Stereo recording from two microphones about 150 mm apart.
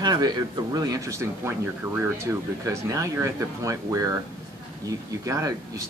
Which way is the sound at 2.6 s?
20° right (ahead or behind).